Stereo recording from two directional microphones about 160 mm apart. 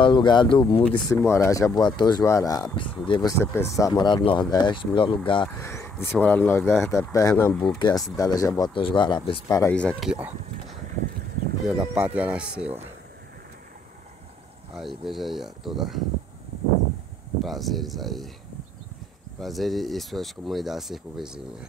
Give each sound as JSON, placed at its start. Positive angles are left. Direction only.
{"t": 0.0, "sound": "speech", "side_deg": 30}
{"t": 0.8, "sound": "speech", "side_deg": 15}
{"t": 5.6, "sound": "a sound", "side_deg": 15}
{"t": 6.1, "sound": "speech", "side_deg": 10}
{"t": 7.5, "sound": "speech", "side_deg": 5}
{"t": 8.2, "sound": "speech", "side_deg": 25}
{"t": 9.5, "sound": "speech", "side_deg": 20}
{"t": 9.8, "sound": "speech", "side_deg": 5}
{"t": 10.0, "sound": "speech", "side_deg": -5}
{"t": 14.8, "sound": "speech", "side_deg": 0}
{"t": 17.4, "sound": "speech", "side_deg": 0}
{"t": 19.4, "sound": "speech", "side_deg": 0}